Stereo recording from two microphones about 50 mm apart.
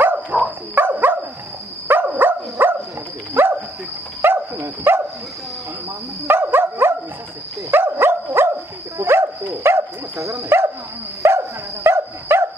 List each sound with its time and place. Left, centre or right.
0.0 s dog: right
6.2 s dog: right